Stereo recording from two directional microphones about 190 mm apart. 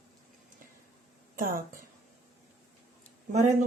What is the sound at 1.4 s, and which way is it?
Speech, 45° right (ahead or behind).